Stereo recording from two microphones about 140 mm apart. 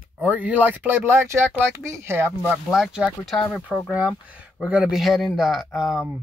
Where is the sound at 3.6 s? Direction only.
10° right (ahead or behind).